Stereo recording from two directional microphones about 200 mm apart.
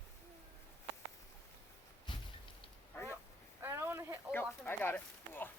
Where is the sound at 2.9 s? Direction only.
10° left (ahead or behind).